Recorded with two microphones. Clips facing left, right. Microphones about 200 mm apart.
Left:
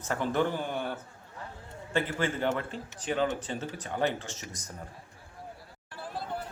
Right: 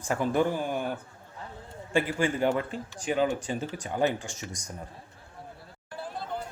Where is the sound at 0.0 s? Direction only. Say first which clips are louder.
Right 3 dB; 10° right (ahead or behind).